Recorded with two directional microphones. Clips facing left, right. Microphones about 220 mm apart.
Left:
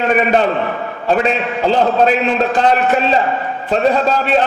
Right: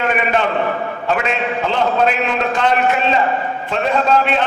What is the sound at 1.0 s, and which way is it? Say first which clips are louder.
A man's voice: left 5 dB; 35° left (ahead or behind).